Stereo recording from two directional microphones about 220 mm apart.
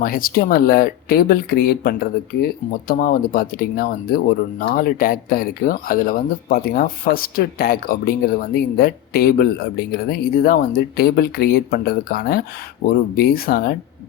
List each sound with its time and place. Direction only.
0.0 s speech: 40° left (ahead or behind)